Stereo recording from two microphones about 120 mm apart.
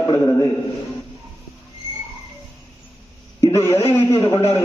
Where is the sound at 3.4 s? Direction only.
30° left (ahead or behind).